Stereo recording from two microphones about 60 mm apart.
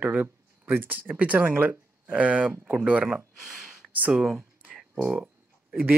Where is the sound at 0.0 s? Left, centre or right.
Right.